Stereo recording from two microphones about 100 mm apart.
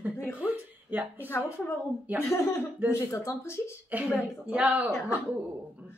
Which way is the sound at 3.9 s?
15° right (ahead or behind).